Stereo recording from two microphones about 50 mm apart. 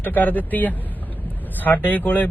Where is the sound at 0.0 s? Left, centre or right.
Left.